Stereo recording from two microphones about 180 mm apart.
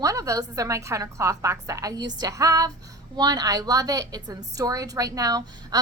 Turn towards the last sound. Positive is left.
turn(degrees=-20)  # may be behind; listen again after turning